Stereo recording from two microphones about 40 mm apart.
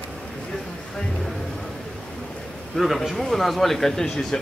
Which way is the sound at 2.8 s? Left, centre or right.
Centre.